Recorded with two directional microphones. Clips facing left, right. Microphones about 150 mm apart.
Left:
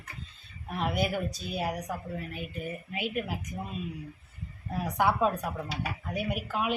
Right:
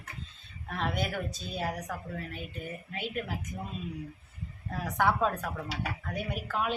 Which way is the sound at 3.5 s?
20° left (ahead or behind).